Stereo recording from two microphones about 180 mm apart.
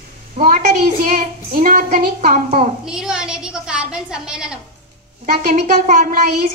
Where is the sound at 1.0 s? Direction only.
45° right (ahead or behind).